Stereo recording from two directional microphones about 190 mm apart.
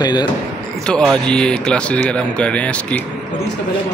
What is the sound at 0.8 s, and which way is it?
Speech, 5° left (ahead or behind).